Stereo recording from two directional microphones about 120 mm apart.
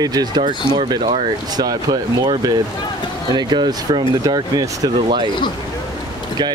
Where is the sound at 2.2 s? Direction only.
40° right (ahead or behind).